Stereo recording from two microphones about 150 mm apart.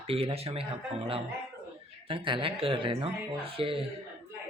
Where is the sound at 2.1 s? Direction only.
35° right (ahead or behind).